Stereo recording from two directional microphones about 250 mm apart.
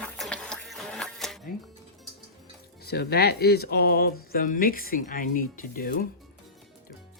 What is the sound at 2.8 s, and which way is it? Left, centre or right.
Speech, left.